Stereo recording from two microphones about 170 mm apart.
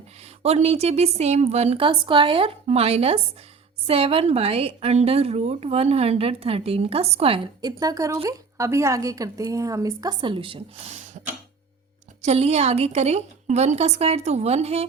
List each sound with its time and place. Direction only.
0.2 s a woman's voice: 40° right (ahead or behind)
12.2 s a woman's voice: 40° right (ahead or behind)